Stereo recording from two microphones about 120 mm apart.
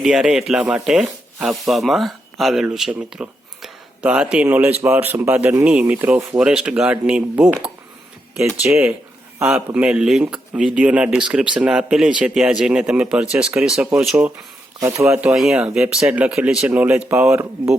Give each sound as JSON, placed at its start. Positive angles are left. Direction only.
{"t": 0.0, "sound": "speech", "side_deg": -5}
{"t": 14.8, "sound": "speech", "side_deg": -25}
{"t": 15.2, "sound": "speech", "side_deg": -5}